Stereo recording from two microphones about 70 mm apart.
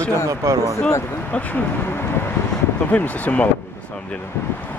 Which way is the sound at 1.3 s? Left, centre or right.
Left.